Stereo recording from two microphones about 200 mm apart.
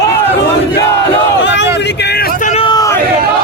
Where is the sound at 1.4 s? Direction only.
65° left (ahead or behind).